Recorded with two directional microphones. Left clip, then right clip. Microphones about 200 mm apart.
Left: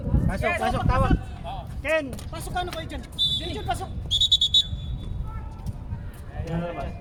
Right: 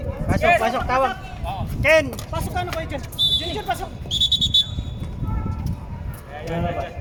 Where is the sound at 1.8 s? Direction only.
55° right (ahead or behind).